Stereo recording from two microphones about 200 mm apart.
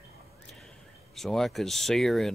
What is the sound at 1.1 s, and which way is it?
Speech, centre (ahead or behind).